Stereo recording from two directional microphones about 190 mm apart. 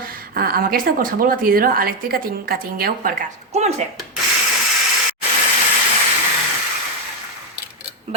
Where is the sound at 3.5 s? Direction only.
35° right (ahead or behind).